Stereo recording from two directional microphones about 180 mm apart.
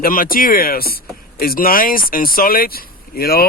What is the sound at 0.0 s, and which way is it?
Speech, 55° left (ahead or behind).